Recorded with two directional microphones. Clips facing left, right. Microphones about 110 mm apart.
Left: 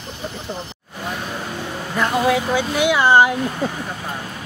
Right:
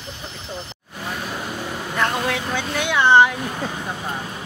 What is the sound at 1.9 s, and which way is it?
Speech, 10° left (ahead or behind).